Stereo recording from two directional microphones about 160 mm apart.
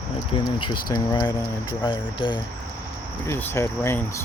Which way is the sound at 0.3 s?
30° left (ahead or behind).